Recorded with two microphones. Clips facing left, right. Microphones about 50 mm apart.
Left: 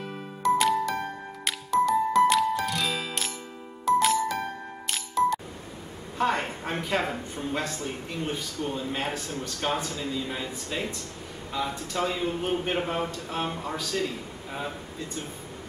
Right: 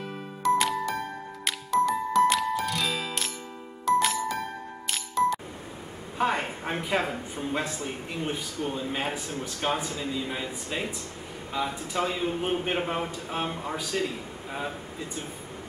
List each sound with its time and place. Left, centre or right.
0.0 s music: centre
6.1 s a sound: centre
7.3 s a man's voice: centre
13.8 s a man's voice: right
14.5 s speech: centre